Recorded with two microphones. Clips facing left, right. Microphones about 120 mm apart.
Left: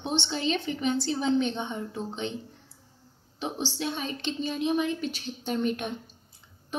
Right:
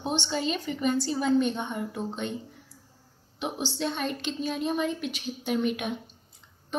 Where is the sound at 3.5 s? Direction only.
10° right (ahead or behind).